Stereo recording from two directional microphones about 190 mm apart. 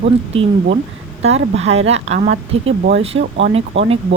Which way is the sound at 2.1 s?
50° right (ahead or behind).